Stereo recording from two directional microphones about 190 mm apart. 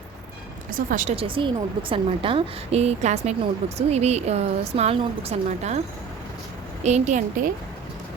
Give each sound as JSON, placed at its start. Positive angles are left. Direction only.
{"t": 0.7, "sound": "speech", "side_deg": -45}
{"t": 1.1, "sound": "a woman's voice", "side_deg": -30}
{"t": 6.8, "sound": "a woman's voice", "side_deg": -35}